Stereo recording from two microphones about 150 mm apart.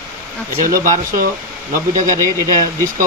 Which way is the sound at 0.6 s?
65° right (ahead or behind).